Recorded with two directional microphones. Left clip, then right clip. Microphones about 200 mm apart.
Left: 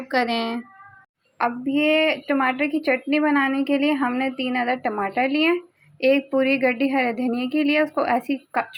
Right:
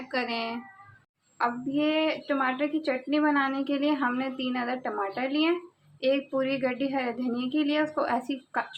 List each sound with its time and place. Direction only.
0.1 s speech: 35° left (ahead or behind)
1.4 s a woman's voice: 25° left (ahead or behind)